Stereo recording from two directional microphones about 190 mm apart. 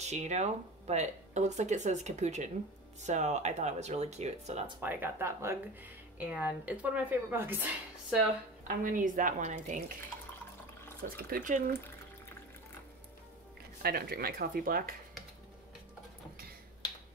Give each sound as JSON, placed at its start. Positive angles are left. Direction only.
{"t": 0.0, "sound": "speech", "side_deg": -35}
{"t": 4.7, "sound": "speech", "side_deg": -10}
{"t": 8.6, "sound": "speech", "side_deg": -45}
{"t": 11.0, "sound": "speech", "side_deg": -50}
{"t": 13.8, "sound": "speech", "side_deg": -55}